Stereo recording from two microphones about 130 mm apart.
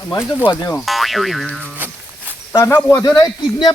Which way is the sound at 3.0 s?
30° left (ahead or behind).